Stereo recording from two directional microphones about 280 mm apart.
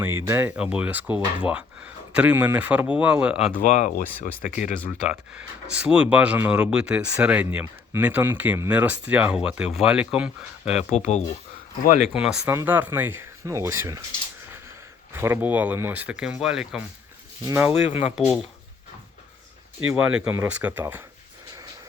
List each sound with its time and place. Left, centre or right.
0.0 s speech: centre
3.6 s speech: left
4.8 s speech: centre
10.9 s speech: left
12.1 s speech: centre
15.1 s speech: centre
19.9 s speech: centre